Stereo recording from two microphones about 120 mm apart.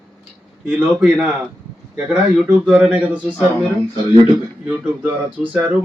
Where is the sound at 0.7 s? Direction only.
10° right (ahead or behind).